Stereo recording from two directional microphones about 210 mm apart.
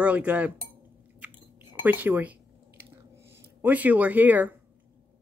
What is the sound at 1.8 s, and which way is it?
Speech, 10° right (ahead or behind).